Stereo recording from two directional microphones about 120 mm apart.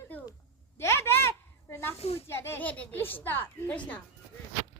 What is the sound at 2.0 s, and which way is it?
Speech, 55° left (ahead or behind).